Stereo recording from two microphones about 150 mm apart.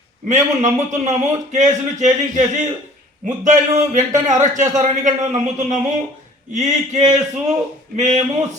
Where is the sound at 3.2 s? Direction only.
55° right (ahead or behind).